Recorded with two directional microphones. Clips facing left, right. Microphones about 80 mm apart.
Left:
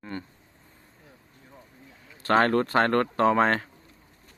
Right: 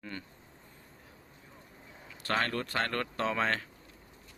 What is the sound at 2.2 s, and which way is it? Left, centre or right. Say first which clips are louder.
Speech: left 11 dB; left.